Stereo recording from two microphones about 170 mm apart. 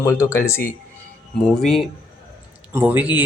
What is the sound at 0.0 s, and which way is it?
Speech, 15° left (ahead or behind).